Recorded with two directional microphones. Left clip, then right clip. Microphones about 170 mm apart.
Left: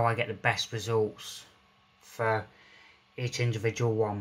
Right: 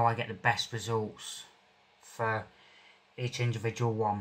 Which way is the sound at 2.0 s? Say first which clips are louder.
Left 3 dB; 20° left (ahead or behind).